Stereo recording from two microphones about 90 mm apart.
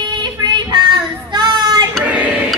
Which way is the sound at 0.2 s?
55° right (ahead or behind).